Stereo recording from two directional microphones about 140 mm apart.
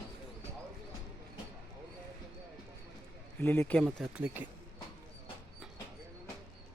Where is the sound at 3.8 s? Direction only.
5° right (ahead or behind).